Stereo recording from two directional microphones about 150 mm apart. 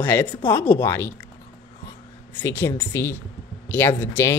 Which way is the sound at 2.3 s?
15° left (ahead or behind).